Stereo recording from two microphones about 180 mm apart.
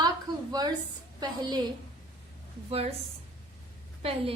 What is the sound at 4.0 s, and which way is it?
Speech, 35° right (ahead or behind).